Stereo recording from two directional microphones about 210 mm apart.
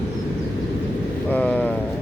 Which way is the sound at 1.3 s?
5° left (ahead or behind).